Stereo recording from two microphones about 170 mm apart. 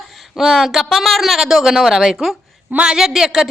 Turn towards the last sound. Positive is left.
turn(degrees=0)  # may be behind; listen again after turning